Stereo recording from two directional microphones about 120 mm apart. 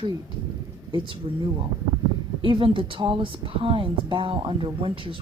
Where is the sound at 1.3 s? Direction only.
45° right (ahead or behind).